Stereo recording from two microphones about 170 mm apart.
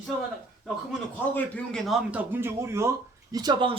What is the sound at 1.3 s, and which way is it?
Speech, 5° left (ahead or behind).